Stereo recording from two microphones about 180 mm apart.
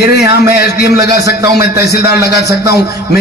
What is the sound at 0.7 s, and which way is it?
Music, 65° left (ahead or behind).